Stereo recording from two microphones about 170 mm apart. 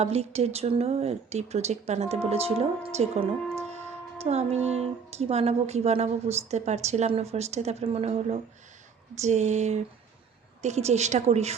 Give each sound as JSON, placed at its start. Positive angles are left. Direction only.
{"t": 0.0, "sound": "speech", "side_deg": -35}